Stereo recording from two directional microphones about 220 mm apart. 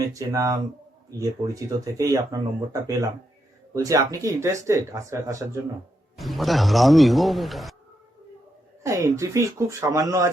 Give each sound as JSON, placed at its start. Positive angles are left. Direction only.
{"t": 0.1, "sound": "speech", "side_deg": -15}
{"t": 6.1, "sound": "a man's voice", "side_deg": 0}
{"t": 8.8, "sound": "speech", "side_deg": -15}